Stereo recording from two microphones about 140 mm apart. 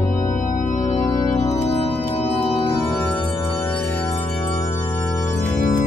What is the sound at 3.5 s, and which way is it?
Music, 15° left (ahead or behind).